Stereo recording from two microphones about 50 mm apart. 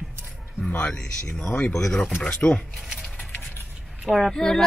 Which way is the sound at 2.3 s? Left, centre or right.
Left.